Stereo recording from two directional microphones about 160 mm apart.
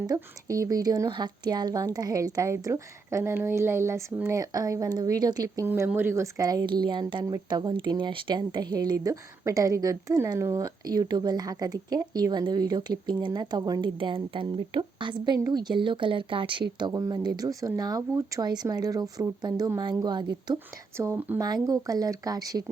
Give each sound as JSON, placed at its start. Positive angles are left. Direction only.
{"t": 0.1, "sound": "speech", "side_deg": -20}
{"t": 21.3, "sound": "speech", "side_deg": -25}